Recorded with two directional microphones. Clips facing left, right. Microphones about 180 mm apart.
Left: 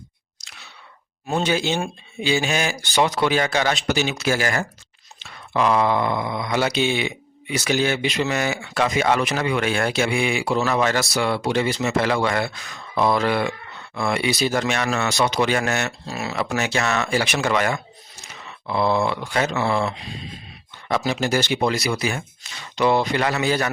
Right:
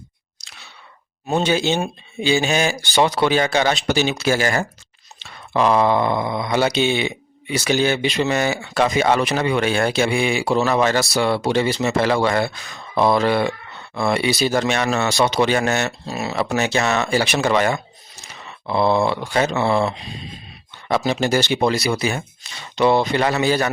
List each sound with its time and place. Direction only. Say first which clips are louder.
1.4 s speech: right 3 dB; 25° right (ahead or behind)
18.6 s a sound: right 3 dB; 30° right (ahead or behind)
20.8 s speech: right 3 dB; 30° right (ahead or behind)